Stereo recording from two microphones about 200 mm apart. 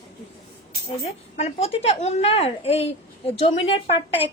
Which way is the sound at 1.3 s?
30° left (ahead or behind).